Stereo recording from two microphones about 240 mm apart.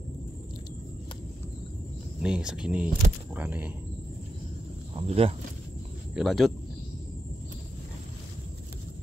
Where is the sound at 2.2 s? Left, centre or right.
Centre.